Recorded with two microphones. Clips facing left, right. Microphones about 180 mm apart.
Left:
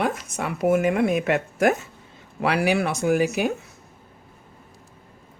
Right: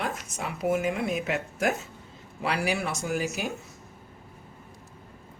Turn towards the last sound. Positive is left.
turn(degrees=65)  # may be behind; listen again after turning